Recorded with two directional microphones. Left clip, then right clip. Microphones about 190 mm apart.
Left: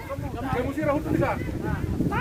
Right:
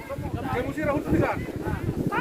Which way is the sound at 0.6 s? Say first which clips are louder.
Left 1 dB; 25° right (ahead or behind).